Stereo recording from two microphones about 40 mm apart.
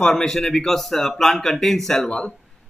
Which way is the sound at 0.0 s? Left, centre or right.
Centre.